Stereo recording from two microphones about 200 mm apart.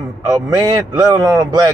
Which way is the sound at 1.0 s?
20° right (ahead or behind).